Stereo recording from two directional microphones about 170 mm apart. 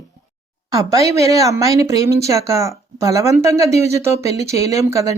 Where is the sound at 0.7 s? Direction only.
20° right (ahead or behind).